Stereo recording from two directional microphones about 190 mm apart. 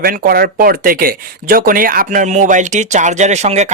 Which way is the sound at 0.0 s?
50° right (ahead or behind).